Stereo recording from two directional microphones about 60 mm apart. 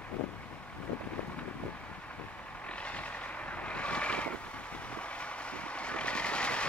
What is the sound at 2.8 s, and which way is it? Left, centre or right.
Vehicle, left.